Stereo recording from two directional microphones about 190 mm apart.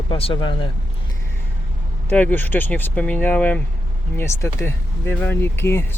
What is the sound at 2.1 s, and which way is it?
Speech, 10° left (ahead or behind).